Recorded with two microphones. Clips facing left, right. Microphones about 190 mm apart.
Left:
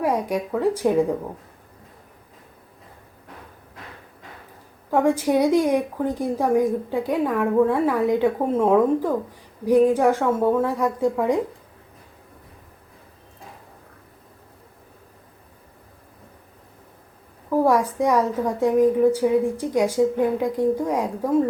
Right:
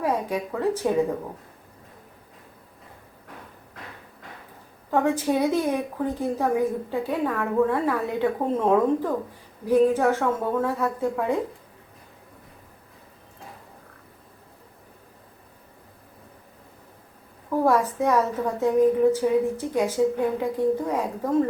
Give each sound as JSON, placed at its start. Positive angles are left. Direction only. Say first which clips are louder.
{"t": 0.0, "sound": "a woman's voice", "louder": "left 3 dB", "side_deg": 10}
{"t": 4.9, "sound": "a woman's voice", "louder": "left 3 dB", "side_deg": 10}
{"t": 17.5, "sound": "a woman's voice", "louder": "left 2 dB", "side_deg": 10}